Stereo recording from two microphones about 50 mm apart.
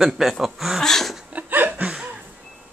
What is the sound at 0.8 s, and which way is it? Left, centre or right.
Speech, centre.